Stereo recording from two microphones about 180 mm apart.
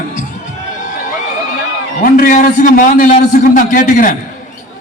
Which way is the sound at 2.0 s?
50° left (ahead or behind).